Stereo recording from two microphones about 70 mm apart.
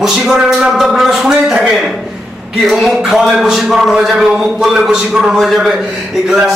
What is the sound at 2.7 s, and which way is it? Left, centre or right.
Speech, centre.